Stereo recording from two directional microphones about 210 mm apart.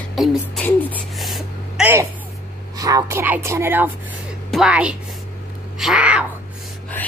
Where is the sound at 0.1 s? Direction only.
Centre (ahead or behind).